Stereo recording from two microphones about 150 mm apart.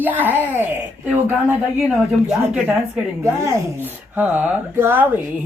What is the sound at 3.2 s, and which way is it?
Speech, 20° right (ahead or behind).